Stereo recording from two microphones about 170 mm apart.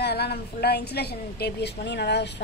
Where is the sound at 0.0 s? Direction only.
70° left (ahead or behind).